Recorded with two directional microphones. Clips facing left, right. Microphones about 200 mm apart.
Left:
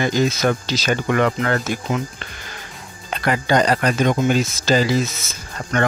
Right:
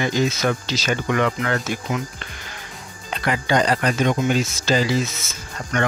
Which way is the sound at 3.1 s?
45° left (ahead or behind).